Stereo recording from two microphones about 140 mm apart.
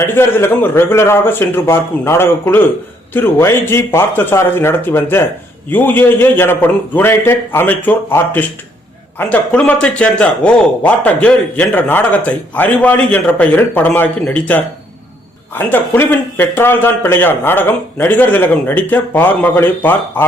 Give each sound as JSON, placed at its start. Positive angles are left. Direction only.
{"t": 0.0, "sound": "a man's voice", "side_deg": 15}